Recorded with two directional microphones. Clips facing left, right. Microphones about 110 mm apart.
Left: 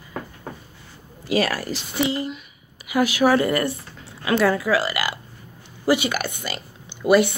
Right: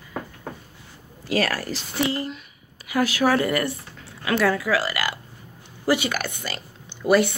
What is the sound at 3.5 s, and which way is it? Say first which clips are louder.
Speech: left 2 dB; 30° left (ahead or behind).